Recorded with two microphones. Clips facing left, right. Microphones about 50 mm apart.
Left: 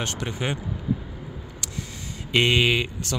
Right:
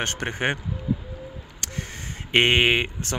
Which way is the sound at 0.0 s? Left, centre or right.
Right.